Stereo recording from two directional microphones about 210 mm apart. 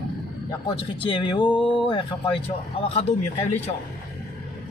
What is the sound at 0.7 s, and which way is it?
Speech, 25° left (ahead or behind).